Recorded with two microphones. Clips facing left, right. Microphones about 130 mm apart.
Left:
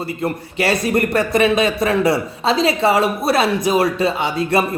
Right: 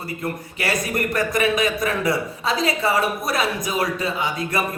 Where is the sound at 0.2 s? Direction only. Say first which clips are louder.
Left 8 dB; 25° left (ahead or behind).